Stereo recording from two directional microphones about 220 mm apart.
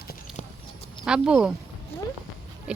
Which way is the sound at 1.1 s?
5° right (ahead or behind).